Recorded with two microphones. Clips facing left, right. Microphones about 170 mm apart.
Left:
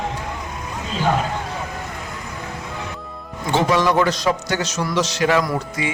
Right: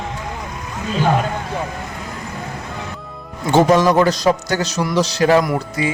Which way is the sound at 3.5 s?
45° right (ahead or behind).